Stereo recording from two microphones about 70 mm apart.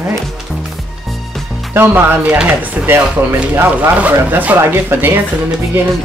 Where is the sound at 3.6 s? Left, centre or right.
Right.